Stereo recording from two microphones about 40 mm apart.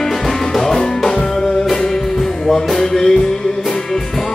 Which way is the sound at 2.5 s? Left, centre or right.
Centre.